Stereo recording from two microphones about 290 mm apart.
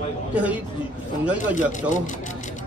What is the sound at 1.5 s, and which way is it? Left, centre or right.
Speech, left.